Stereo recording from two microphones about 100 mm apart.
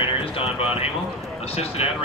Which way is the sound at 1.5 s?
90° left.